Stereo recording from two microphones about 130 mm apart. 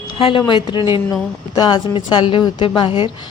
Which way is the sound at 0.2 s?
40° left (ahead or behind).